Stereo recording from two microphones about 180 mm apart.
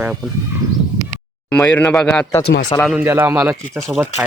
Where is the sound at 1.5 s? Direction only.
10° left (ahead or behind).